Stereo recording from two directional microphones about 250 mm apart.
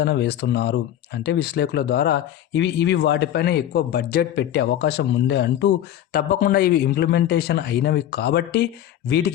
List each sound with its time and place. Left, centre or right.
0.0 s speech: left